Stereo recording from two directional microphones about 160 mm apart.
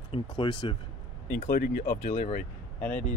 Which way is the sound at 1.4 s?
60° left (ahead or behind).